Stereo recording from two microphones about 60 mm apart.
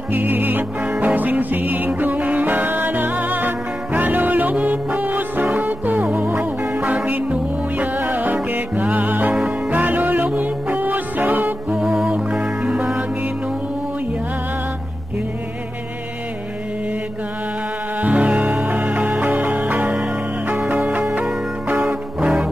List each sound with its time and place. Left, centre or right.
0.1 s music: right
11.7 s music: centre
18.0 s music: right
21.8 s music: centre